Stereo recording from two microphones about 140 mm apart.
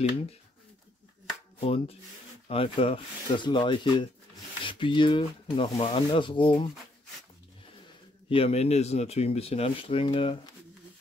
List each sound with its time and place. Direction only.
1.6 s speech: 45° left (ahead or behind)
8.3 s speech: 45° left (ahead or behind)